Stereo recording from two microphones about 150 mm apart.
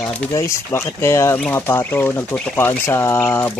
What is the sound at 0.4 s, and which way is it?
Speech, 20° left (ahead or behind).